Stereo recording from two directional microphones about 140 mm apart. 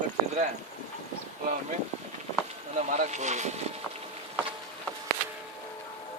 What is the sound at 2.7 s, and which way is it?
Speech, 55° right (ahead or behind).